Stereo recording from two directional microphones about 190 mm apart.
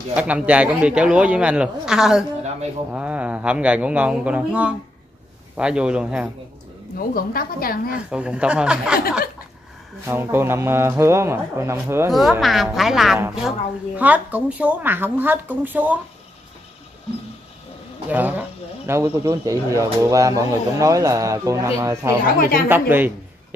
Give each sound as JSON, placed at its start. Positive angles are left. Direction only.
{"t": 0.1, "sound": "speech", "side_deg": -5}
{"t": 7.0, "sound": "a woman's voice", "side_deg": 50}
{"t": 8.1, "sound": "speech", "side_deg": -5}
{"t": 10.0, "sound": "speech", "side_deg": -10}
{"t": 12.1, "sound": "speech", "side_deg": 0}
{"t": 18.1, "sound": "speech", "side_deg": -10}